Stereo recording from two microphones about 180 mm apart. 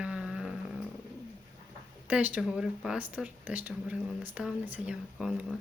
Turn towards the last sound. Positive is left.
turn(degrees=-5)  # may be behind; listen again after turning